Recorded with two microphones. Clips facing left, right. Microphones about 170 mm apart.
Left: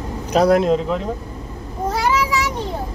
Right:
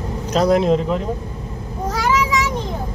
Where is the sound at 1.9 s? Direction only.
30° left (ahead or behind).